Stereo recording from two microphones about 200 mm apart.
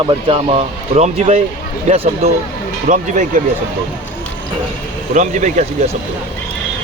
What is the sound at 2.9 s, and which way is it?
Speech, 40° right (ahead or behind).